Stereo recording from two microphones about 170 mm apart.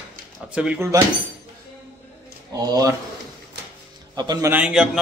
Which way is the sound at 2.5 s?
20° right (ahead or behind).